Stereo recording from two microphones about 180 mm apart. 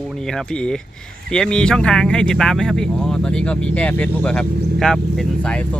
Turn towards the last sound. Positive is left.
turn(degrees=5)  # may be behind; listen again after turning